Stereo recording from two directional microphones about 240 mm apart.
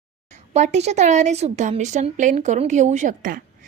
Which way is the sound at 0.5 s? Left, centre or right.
Right.